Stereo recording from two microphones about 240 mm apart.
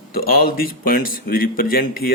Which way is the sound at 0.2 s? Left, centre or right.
Left.